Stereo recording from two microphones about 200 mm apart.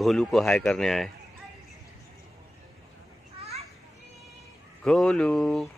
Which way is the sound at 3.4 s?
30° right (ahead or behind).